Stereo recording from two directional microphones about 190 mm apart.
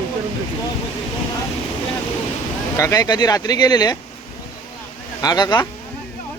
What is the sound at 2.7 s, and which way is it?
Speech, 15° left (ahead or behind).